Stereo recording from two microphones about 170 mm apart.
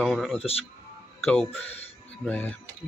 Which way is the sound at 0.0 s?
Centre (ahead or behind).